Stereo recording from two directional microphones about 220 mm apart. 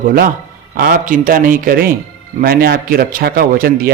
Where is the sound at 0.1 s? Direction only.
40° right (ahead or behind).